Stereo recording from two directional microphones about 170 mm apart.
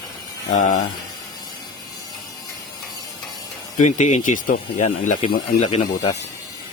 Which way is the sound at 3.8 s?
45° left (ahead or behind).